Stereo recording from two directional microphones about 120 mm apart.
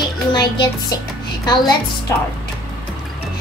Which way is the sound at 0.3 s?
35° left (ahead or behind).